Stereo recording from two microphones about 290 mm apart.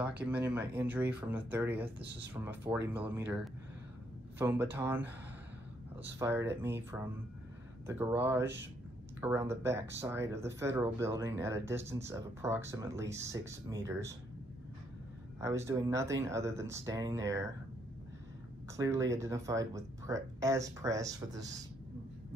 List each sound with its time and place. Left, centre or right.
0.0 s speech: centre
2.0 s speech: right
2.4 s speech: centre
4.4 s speech: centre
6.1 s speech: centre
15.4 s speech: centre
18.8 s speech: centre